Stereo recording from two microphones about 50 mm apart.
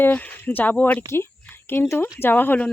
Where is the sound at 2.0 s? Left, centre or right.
Left.